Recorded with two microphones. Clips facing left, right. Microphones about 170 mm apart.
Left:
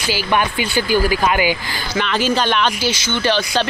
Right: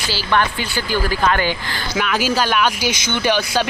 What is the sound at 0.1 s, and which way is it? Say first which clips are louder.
Speech: left 1 dB; 15° left (ahead or behind).